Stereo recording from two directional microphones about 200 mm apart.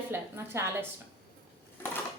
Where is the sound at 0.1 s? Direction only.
10° right (ahead or behind).